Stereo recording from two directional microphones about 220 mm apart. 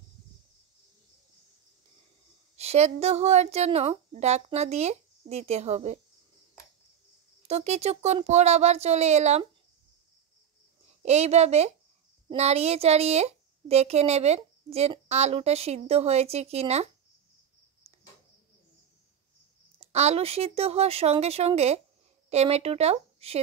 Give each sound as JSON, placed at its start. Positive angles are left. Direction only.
{"t": 2.5, "sound": "a woman's voice", "side_deg": -30}
{"t": 7.4, "sound": "a woman's voice", "side_deg": -30}
{"t": 11.0, "sound": "a woman's voice", "side_deg": -30}
{"t": 19.8, "sound": "a woman's voice", "side_deg": -30}